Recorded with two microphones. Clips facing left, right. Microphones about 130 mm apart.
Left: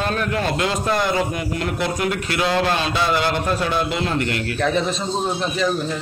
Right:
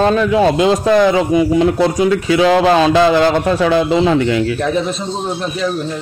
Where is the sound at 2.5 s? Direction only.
90° right.